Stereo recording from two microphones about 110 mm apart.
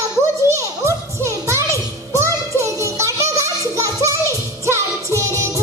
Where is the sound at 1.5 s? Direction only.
25° right (ahead or behind).